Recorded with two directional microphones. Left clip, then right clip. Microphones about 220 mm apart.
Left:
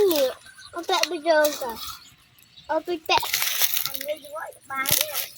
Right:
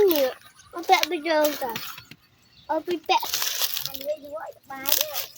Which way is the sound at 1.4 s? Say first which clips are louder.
Left 1 dB; 10° right (ahead or behind).